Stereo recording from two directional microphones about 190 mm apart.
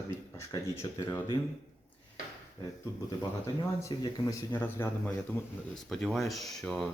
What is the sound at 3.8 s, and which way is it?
A man's voice, 15° left (ahead or behind).